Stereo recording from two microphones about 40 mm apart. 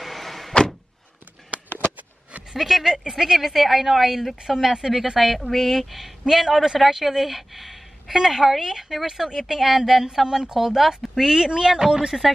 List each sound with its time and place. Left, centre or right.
0.0 s door: centre
2.5 s speech: centre
10.2 s speech: centre
10.5 s speech: centre